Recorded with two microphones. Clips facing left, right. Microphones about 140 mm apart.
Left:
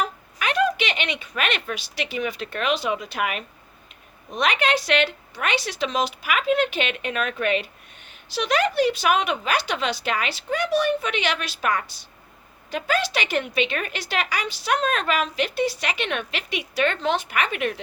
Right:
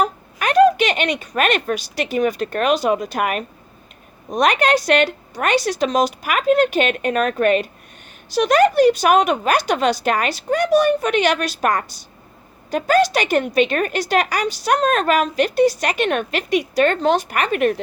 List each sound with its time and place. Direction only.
0.0 s a woman's voice: 45° right (ahead or behind)